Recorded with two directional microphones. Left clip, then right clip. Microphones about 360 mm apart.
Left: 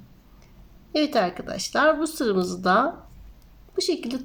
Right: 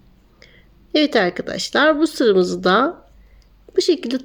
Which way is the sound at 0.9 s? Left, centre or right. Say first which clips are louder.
Right 6 dB; centre.